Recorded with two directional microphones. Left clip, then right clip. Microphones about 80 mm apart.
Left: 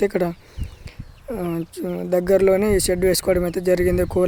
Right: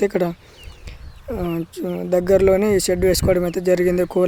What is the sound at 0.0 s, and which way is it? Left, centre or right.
Speech, centre.